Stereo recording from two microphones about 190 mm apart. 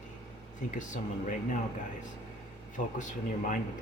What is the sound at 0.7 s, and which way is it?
Speech, 40° left (ahead or behind).